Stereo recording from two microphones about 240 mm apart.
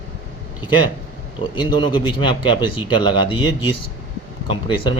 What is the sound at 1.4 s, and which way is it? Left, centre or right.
Speech, centre.